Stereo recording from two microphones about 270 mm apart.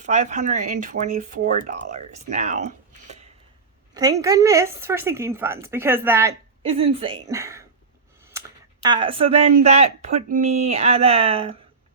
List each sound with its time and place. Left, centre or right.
0.0 s speech: right
3.9 s a woman's voice: centre
6.7 s a woman's voice: right